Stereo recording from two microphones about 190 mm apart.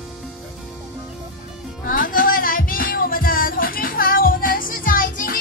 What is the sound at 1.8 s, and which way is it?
Music, 50° left (ahead or behind).